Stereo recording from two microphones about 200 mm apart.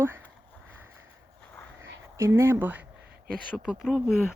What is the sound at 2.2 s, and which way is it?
Speech, 15° right (ahead or behind).